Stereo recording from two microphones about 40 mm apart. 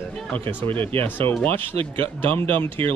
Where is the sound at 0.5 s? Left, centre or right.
Left.